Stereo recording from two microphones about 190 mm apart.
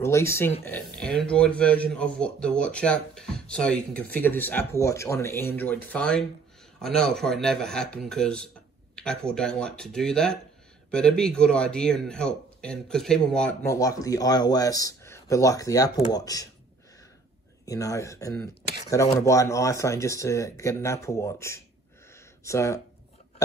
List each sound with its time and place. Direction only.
0.0 s a man's voice: 15° left (ahead or behind)
13.7 s speech: 20° left (ahead or behind)
17.6 s speech: 15° left (ahead or behind)